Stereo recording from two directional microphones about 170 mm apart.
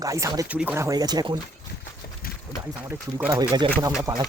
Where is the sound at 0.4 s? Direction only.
10° right (ahead or behind); by 1.4 s 25° right (ahead or behind).